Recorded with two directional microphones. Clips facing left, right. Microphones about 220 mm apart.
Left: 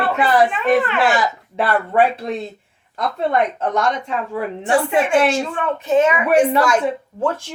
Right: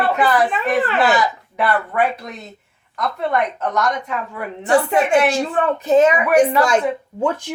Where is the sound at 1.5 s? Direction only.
30° left (ahead or behind).